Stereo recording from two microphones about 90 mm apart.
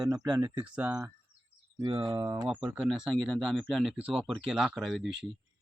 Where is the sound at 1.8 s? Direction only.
55° right (ahead or behind).